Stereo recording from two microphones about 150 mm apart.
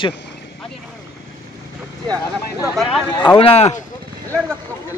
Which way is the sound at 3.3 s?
40° left (ahead or behind).